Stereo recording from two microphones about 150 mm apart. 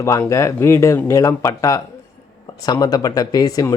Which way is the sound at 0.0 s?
20° left (ahead or behind).